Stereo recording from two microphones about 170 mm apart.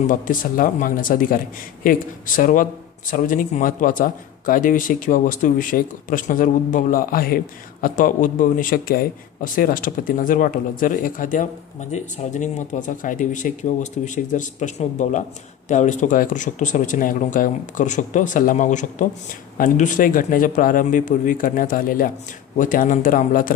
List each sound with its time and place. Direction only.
0.0 s speech: 50° left (ahead or behind)